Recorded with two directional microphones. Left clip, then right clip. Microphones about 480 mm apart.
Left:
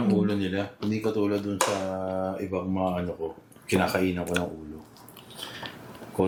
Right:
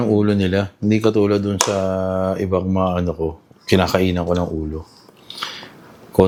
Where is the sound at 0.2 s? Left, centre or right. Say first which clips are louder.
Right 9 dB; right.